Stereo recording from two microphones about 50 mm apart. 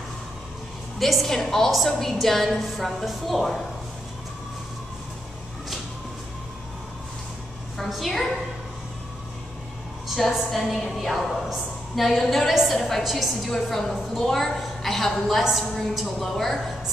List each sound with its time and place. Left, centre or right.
0.9 s a woman's voice: centre
7.7 s a woman's voice: centre
10.0 s a woman's voice: centre